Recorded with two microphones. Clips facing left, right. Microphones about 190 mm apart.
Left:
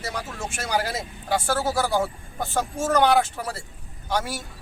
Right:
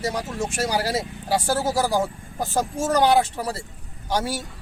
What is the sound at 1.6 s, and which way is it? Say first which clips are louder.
Speech: right 2 dB; 20° right (ahead or behind).